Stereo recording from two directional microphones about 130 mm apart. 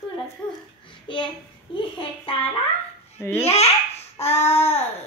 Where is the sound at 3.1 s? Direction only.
20° left (ahead or behind).